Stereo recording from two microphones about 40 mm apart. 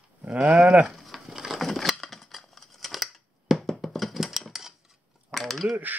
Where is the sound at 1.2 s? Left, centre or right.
Centre.